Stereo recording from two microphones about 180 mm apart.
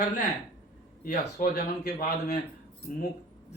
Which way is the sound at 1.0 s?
50° left (ahead or behind).